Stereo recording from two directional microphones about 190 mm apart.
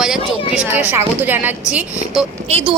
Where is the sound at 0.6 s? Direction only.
10° right (ahead or behind).